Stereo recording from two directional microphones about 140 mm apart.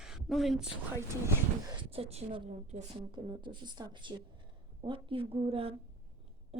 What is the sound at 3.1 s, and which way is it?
A woman's voice, 35° right (ahead or behind).